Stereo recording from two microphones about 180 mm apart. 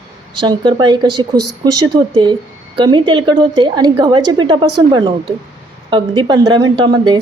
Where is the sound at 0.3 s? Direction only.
25° right (ahead or behind).